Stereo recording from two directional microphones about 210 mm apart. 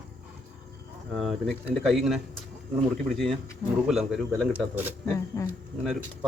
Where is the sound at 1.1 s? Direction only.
Centre (ahead or behind).